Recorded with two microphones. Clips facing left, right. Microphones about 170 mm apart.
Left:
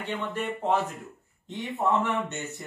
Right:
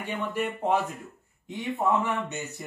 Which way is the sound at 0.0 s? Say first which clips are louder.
Right 1 dB; 10° right (ahead or behind).